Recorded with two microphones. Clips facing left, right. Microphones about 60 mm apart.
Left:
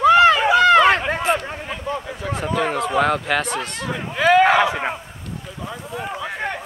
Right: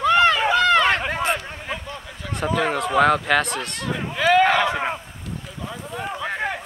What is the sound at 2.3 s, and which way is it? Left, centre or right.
Speech, centre.